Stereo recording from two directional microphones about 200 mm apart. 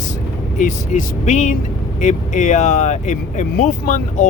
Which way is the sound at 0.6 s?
35° left (ahead or behind).